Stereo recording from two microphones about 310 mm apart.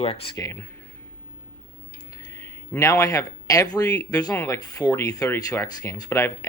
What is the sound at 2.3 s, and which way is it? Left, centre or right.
Speech, centre.